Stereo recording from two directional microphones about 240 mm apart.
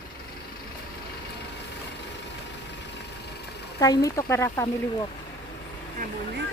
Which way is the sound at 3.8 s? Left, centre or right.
Centre.